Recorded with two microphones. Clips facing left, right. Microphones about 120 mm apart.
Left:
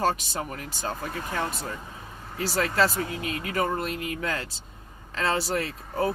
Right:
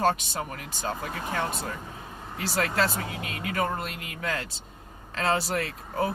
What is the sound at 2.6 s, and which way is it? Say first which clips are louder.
Speech: left 2 dB; 35° left (ahead or behind).